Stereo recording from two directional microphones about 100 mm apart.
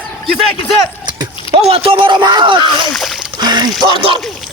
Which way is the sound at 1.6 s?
70° right (ahead or behind).